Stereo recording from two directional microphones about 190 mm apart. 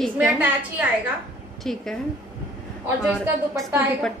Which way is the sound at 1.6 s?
Centre (ahead or behind).